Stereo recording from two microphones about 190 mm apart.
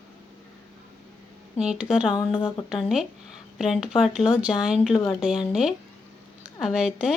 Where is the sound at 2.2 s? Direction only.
30° left (ahead or behind).